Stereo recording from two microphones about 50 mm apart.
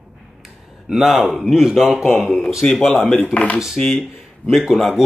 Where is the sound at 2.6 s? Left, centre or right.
Left.